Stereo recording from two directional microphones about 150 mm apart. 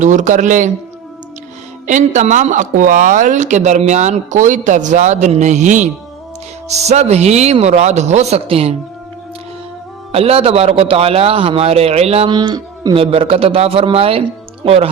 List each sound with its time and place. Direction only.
0.0 s speech: 55° right (ahead or behind)
1.9 s speech: 55° right (ahead or behind)
10.1 s a man's voice: 40° right (ahead or behind)